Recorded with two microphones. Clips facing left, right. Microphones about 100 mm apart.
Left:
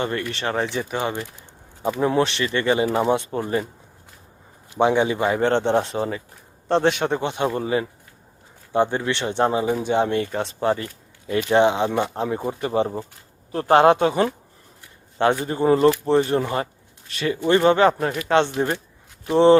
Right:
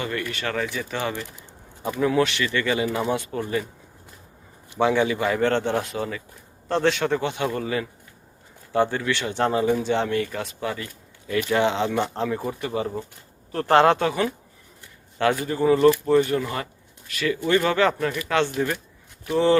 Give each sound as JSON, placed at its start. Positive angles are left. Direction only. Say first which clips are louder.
{"t": 0.0, "sound": "speech", "louder": "left 3 dB", "side_deg": 30}
{"t": 4.8, "sound": "speech", "louder": "left 2 dB", "side_deg": 20}
{"t": 6.7, "sound": "speech", "louder": "left 2 dB", "side_deg": 20}
{"t": 15.2, "sound": "speech", "louder": "left 2 dB", "side_deg": 25}
{"t": 15.6, "sound": "speech", "louder": "left 1 dB", "side_deg": 35}
{"t": 15.9, "sound": "speech", "louder": "even", "side_deg": 25}
{"t": 17.9, "sound": "speech", "louder": "left 4 dB", "side_deg": 35}